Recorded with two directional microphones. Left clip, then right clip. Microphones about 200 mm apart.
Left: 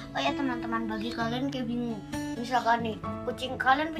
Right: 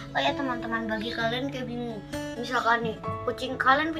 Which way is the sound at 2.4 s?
15° left (ahead or behind).